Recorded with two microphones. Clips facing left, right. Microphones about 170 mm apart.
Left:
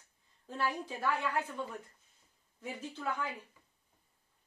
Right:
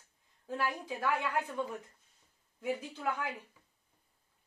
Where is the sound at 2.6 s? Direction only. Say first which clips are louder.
Right 5 dB; 10° right (ahead or behind).